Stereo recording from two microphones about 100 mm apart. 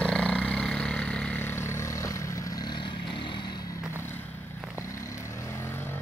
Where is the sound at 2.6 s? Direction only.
50° left (ahead or behind).